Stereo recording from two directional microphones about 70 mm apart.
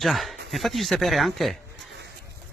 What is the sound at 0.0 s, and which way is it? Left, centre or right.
Speech, centre.